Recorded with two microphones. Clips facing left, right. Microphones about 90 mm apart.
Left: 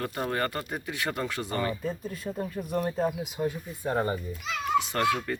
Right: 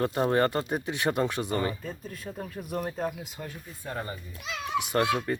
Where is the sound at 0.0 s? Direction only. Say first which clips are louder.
Right 5 dB; 25° right (ahead or behind).